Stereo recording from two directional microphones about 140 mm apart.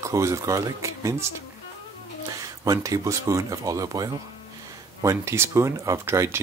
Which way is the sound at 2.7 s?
25° right (ahead or behind).